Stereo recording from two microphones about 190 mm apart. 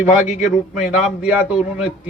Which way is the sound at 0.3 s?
40° left (ahead or behind).